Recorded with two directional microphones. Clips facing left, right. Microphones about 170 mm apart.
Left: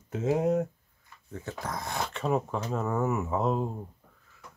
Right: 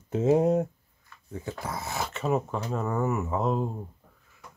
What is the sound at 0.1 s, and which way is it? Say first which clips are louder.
Speech: right 4 dB; 30° right (ahead or behind).